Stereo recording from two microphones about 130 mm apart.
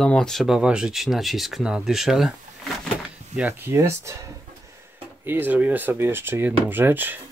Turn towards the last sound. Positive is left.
turn(degrees=-15)  # may be behind; listen again after turning